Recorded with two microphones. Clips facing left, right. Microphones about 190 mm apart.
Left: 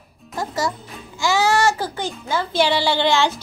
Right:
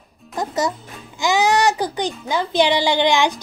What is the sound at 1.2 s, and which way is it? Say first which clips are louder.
Babbling: right 1 dB; 20° right (ahead or behind).